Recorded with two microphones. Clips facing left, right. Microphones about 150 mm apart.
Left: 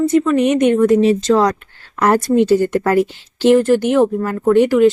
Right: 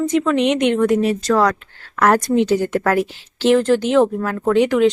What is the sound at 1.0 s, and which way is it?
A woman's voice, 20° left (ahead or behind).